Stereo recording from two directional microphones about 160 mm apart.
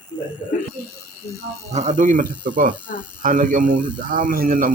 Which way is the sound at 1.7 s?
45° right (ahead or behind).